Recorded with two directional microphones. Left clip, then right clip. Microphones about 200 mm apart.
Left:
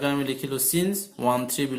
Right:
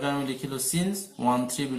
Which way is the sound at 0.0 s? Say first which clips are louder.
Left 3 dB; 30° left (ahead or behind).